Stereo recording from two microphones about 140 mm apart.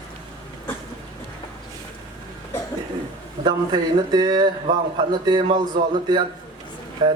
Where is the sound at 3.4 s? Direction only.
30° right (ahead or behind).